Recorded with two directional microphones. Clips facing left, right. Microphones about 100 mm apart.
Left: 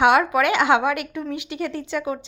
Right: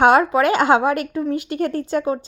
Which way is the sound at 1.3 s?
45° right (ahead or behind).